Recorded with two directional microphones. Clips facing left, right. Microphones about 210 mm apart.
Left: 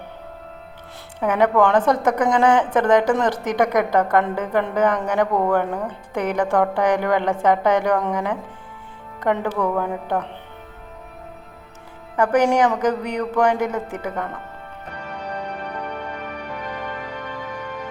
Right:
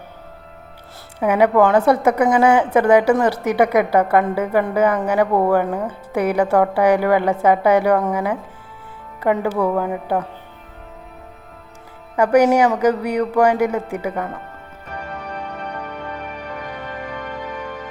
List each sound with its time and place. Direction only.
1.2 s a woman's voice: 10° right (ahead or behind)
12.1 s a woman's voice: 10° right (ahead or behind)